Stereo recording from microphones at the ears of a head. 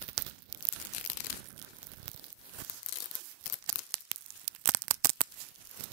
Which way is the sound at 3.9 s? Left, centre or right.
Right.